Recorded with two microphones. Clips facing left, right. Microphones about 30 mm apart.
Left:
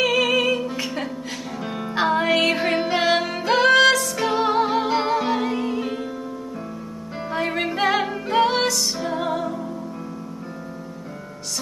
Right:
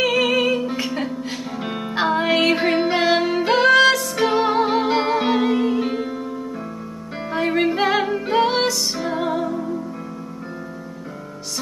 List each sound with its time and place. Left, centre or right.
0.0 s music: centre
1.7 s music: right
2.0 s music: centre
7.2 s music: centre